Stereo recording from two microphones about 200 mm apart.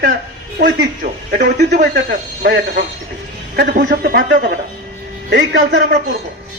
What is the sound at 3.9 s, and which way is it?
A man's voice, 60° right (ahead or behind).